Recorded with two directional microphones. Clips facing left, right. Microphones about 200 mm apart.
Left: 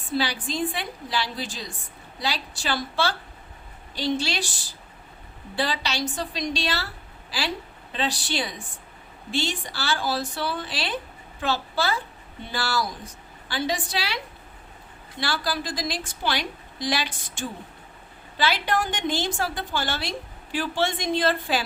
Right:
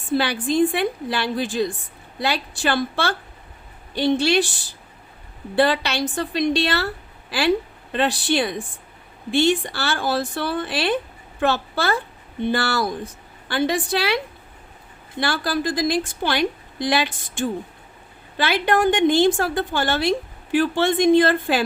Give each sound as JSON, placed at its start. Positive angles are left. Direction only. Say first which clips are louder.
{"t": 0.1, "sound": "a woman's voice", "louder": "right 6 dB", "side_deg": -55}
{"t": 5.5, "sound": "a woman's voice", "louder": "right 8 dB", "side_deg": -60}
{"t": 15.2, "sound": "a woman's voice", "louder": "right 6 dB", "side_deg": -55}